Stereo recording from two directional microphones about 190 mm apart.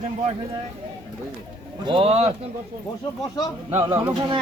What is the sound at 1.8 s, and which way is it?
Speech, 30° right (ahead or behind).